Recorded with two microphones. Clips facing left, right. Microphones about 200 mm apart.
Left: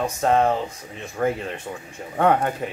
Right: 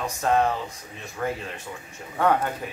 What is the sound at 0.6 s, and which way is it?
Speech, 50° left (ahead or behind).